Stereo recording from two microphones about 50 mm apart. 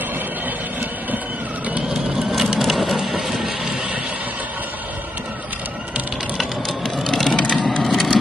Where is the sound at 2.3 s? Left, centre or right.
Centre.